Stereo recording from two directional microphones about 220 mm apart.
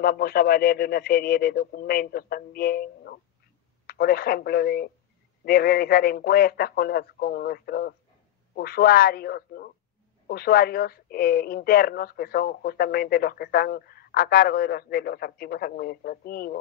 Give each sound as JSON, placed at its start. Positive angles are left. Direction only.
{"t": 0.0, "sound": "speech", "side_deg": 45}